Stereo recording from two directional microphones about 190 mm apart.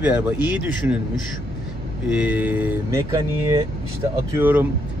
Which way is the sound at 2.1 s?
10° right (ahead or behind).